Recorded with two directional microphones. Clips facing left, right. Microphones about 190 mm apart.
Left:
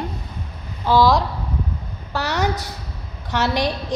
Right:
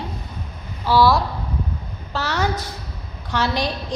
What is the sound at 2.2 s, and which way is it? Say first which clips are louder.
Speech: left 1 dB; 15° left (ahead or behind).